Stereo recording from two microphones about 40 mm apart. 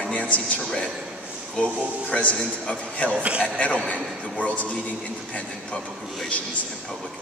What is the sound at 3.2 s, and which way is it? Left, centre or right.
Speech, right.